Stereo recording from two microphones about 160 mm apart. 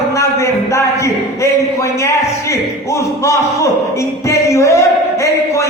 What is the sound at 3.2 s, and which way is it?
Music, 20° left (ahead or behind).